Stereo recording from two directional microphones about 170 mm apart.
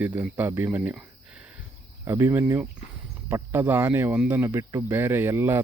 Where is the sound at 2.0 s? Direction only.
15° right (ahead or behind).